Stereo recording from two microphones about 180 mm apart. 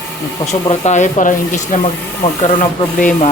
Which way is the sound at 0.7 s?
40° left (ahead or behind).